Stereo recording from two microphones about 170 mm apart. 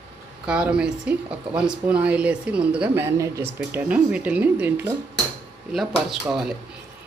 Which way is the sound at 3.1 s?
20° right (ahead or behind).